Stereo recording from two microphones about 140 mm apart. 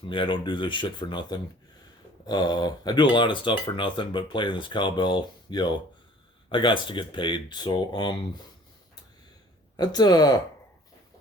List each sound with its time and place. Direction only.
0.0 s speech: 35° left (ahead or behind)
9.7 s speech: 30° left (ahead or behind)